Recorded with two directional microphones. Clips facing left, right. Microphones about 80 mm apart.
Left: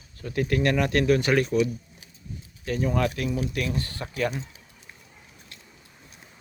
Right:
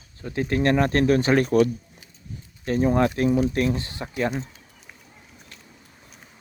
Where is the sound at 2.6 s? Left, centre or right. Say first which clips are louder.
Right 5 dB; right.